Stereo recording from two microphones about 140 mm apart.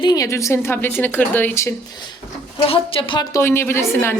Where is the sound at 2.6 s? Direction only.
40° left (ahead or behind).